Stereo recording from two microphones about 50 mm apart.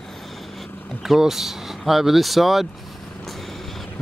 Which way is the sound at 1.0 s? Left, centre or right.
Centre.